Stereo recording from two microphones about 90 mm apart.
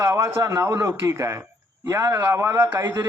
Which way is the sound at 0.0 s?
30° right (ahead or behind).